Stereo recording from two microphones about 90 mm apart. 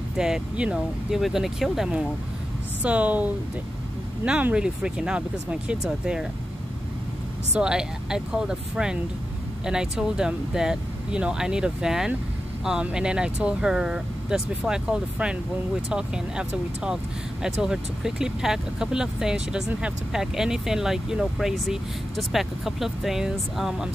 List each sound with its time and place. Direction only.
0.2 s speech: 10° right (ahead or behind)
7.5 s speech: 10° right (ahead or behind)